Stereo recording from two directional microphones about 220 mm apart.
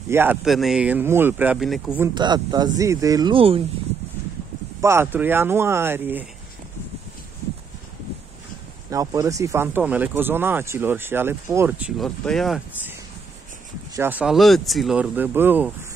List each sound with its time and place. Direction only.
0.1 s speech: 10° right (ahead or behind)
2.1 s speech: 20° right (ahead or behind)
4.8 s speech: 10° right (ahead or behind)
8.9 s speech: 15° right (ahead or behind)
12.0 s speech: centre (ahead or behind)
13.9 s speech: 10° right (ahead or behind)